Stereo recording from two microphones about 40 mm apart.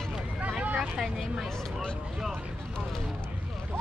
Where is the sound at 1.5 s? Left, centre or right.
Centre.